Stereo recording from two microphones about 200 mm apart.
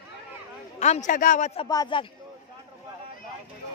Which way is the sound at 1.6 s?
20° left (ahead or behind).